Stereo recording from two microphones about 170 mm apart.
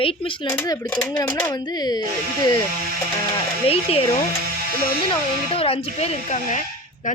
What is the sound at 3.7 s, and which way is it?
Speech, 35° left (ahead or behind).